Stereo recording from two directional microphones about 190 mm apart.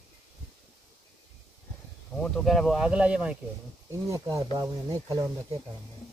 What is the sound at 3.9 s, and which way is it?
Speech, 15° right (ahead or behind).